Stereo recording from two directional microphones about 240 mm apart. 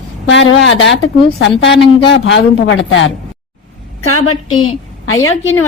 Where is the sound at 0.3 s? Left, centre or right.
Left.